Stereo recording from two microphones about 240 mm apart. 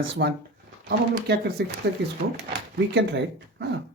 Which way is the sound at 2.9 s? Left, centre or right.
Right.